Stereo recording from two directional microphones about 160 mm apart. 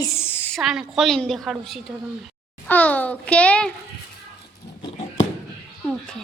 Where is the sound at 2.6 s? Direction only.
10° left (ahead or behind).